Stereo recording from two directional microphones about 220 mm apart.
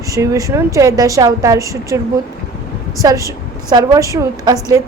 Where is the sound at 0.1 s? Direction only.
15° right (ahead or behind).